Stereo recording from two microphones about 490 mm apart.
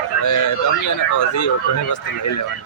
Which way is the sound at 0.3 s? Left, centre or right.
Left.